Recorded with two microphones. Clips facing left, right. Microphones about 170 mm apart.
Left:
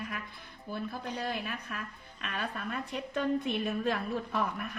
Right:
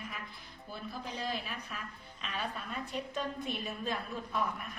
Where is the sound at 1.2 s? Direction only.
60° left (ahead or behind).